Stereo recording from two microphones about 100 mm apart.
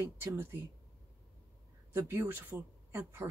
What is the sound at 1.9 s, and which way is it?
Speech, 25° right (ahead or behind).